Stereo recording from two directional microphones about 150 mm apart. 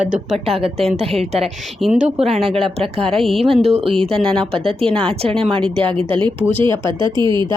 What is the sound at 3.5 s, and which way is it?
Speech, 40° right (ahead or behind).